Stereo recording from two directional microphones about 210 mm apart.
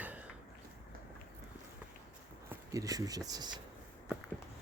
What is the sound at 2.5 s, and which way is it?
Speech, 15° right (ahead or behind).